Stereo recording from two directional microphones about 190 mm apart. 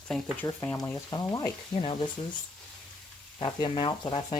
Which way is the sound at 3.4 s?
25° left (ahead or behind).